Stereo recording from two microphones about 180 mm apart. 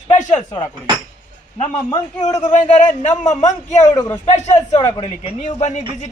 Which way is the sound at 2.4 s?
40° left (ahead or behind).